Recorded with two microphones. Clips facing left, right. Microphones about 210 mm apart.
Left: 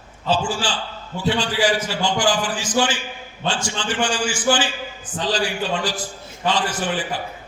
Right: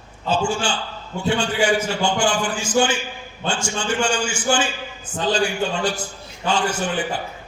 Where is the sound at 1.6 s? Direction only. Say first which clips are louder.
Right 1 dB; 25° right (ahead or behind).